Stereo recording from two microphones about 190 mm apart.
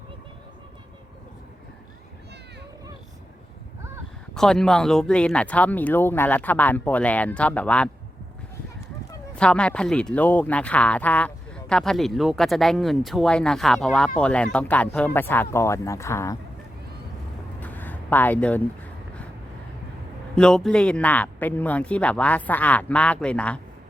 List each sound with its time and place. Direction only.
4.4 s speech: 5° left (ahead or behind)
9.3 s speech: 5° left (ahead or behind)
17.6 s a sound: 10° left (ahead or behind)
20.3 s speech: 5° left (ahead or behind)